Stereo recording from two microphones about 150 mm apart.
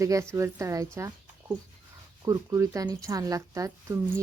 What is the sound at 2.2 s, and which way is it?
A woman's voice, 25° right (ahead or behind).